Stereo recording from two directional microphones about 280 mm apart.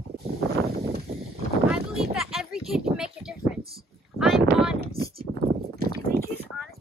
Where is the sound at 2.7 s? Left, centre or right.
Centre.